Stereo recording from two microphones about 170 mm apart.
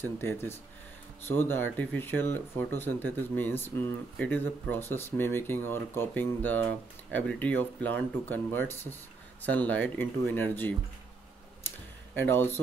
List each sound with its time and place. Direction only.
0.0 s speech: 15° left (ahead or behind)
12.2 s speech: 10° left (ahead or behind)